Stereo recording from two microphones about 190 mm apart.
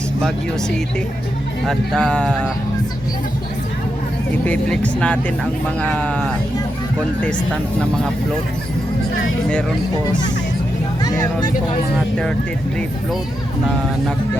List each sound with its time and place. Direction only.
1.6 s speech: 5° left (ahead or behind)
4.4 s speech: 5° left (ahead or behind)
10.1 s speech: 20° left (ahead or behind)
11.0 s music: 20° left (ahead or behind)
11.9 s speech: 5° left (ahead or behind)